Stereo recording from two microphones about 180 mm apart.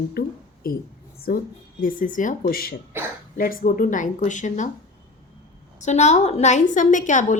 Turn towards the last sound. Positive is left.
turn(degrees=45)  # may be behind; listen again after turning